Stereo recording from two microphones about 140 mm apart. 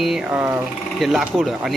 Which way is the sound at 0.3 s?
15° right (ahead or behind).